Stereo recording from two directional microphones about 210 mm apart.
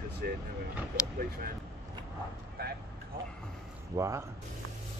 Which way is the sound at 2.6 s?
45° right (ahead or behind).